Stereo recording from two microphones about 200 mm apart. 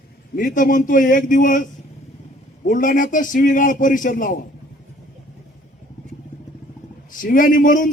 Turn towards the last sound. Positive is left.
turn(degrees=40)  # may be behind; listen again after turning